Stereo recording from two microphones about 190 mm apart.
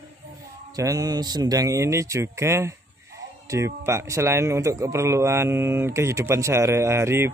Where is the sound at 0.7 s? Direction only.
20° right (ahead or behind).